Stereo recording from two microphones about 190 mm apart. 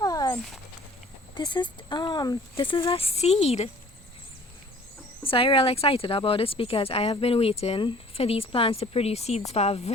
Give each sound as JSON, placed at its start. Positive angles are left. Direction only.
{"t": 0.0, "sound": "a sound", "side_deg": 20}
{"t": 0.3, "sound": "speech", "side_deg": 0}
{"t": 1.4, "sound": "speech", "side_deg": 25}
{"t": 5.2, "sound": "speech", "side_deg": 30}